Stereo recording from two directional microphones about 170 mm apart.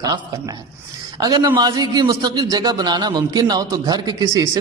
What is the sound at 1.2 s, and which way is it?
A man's voice, 25° right (ahead or behind).